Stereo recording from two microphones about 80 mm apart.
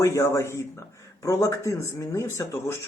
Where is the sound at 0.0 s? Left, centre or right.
Left.